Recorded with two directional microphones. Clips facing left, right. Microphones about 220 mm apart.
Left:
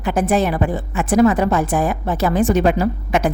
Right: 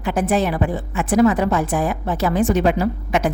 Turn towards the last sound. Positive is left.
turn(degrees=45)  # may be behind; listen again after turning